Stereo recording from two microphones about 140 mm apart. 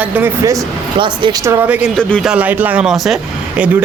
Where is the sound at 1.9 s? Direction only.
5° left (ahead or behind).